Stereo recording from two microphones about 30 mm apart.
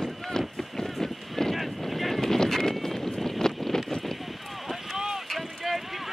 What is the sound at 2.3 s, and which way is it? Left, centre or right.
Horse, centre.